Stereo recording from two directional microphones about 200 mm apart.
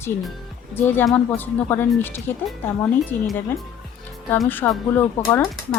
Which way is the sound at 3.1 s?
20° right (ahead or behind).